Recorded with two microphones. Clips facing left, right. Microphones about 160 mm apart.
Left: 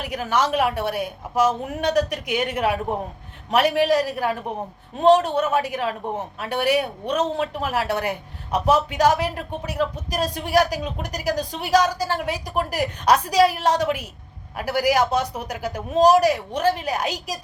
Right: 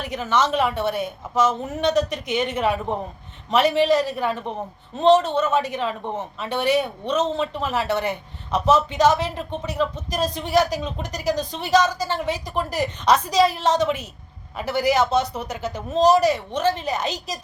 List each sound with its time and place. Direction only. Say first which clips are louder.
0.0 s speech: right 1 dB; 10° left (ahead or behind)